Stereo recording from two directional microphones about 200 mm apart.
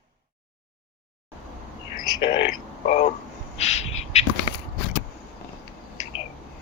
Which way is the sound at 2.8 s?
35° left (ahead or behind).